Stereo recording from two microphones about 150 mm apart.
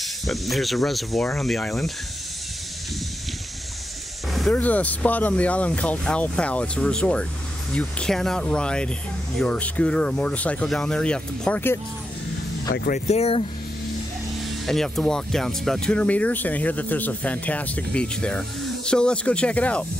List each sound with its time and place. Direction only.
0.3 s speech: centre (ahead or behind)
4.3 s speech: 5° left (ahead or behind)
13.0 s speech: 45° left (ahead or behind)
14.7 s speech: centre (ahead or behind)